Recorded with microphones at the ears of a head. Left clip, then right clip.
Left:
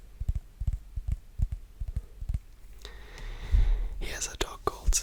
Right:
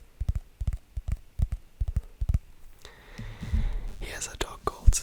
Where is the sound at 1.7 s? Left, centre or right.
Right.